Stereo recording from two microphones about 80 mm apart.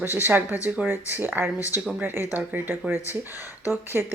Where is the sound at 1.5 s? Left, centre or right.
Left.